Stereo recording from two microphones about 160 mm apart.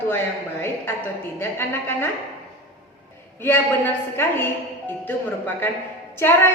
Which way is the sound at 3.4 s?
15° left (ahead or behind).